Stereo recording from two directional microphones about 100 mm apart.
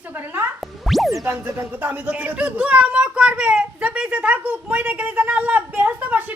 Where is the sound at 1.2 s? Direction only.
25° right (ahead or behind).